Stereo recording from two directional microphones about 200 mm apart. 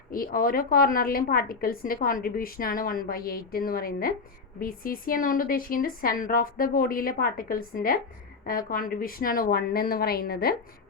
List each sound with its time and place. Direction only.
0.1 s a woman's voice: 45° left (ahead or behind)